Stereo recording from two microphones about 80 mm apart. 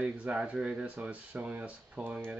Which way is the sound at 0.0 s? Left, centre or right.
Centre.